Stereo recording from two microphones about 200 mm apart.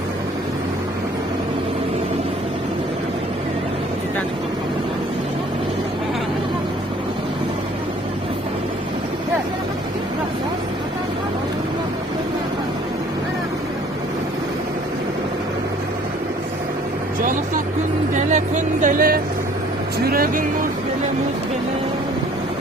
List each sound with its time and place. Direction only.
18.2 s vehicle: 35° right (ahead or behind)